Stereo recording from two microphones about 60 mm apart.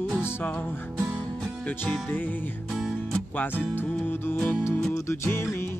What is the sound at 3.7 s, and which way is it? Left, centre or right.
Music, left.